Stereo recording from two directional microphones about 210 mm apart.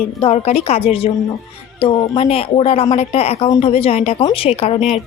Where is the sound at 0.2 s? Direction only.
30° left (ahead or behind).